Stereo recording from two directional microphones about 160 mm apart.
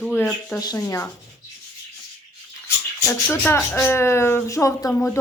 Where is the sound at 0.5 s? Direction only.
20° left (ahead or behind).